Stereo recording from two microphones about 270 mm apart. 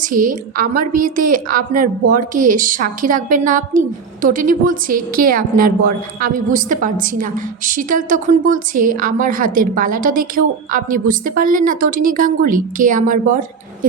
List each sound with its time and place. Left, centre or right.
0.0 s a woman's voice: right